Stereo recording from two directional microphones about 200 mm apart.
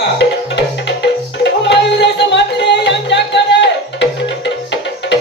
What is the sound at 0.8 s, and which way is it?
Music, 60° left (ahead or behind).